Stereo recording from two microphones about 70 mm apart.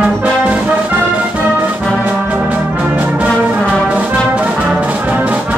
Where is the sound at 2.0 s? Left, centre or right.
Right.